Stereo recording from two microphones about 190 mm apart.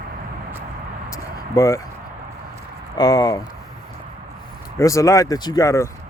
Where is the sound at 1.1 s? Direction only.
15° left (ahead or behind).